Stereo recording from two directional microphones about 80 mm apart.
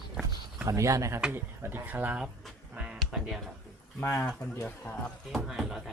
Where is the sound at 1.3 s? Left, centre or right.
Right.